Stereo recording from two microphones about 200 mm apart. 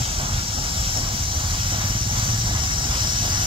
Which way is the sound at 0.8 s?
25° right (ahead or behind).